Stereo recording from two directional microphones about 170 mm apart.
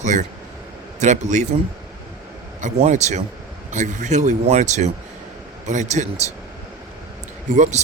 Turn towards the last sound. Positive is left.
turn(degrees=-45)  # may be behind; listen again after turning